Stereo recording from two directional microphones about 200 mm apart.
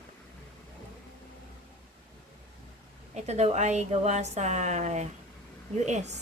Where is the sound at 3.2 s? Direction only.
35° right (ahead or behind).